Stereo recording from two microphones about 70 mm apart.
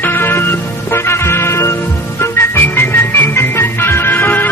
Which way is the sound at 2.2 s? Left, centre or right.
Left.